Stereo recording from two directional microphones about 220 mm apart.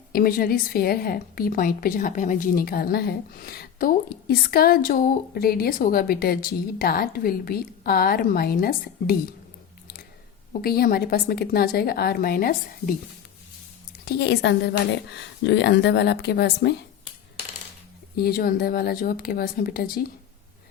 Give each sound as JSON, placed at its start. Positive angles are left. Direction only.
{"t": 0.1, "sound": "a woman's voice", "side_deg": 40}
{"t": 10.6, "sound": "a woman's voice", "side_deg": 45}
{"t": 14.0, "sound": "a woman's voice", "side_deg": 45}
{"t": 18.2, "sound": "a woman's voice", "side_deg": 45}